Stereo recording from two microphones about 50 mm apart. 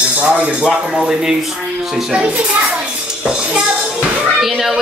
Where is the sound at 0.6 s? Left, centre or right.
Centre.